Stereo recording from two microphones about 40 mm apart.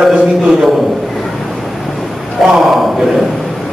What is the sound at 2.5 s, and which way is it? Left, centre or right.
Speech, centre.